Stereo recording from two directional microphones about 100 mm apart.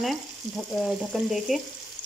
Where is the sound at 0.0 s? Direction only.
Centre (ahead or behind).